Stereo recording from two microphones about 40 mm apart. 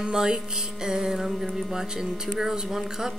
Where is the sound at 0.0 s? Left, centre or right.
Centre.